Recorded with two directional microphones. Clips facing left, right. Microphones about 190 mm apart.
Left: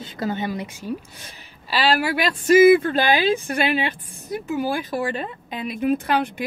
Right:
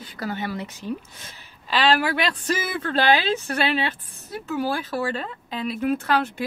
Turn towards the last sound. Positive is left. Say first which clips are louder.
# left 2 dB
turn(degrees=15)  # may be behind; listen again after turning